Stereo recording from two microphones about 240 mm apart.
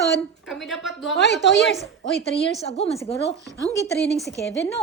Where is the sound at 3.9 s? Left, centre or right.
Left.